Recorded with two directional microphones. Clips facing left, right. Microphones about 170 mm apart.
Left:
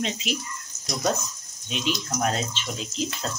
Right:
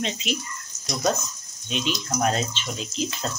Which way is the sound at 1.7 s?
Centre (ahead or behind).